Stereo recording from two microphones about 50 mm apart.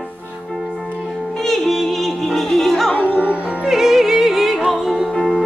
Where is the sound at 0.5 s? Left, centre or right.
Centre.